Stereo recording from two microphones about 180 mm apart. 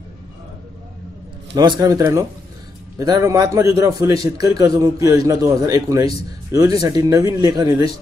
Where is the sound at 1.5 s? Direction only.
20° right (ahead or behind).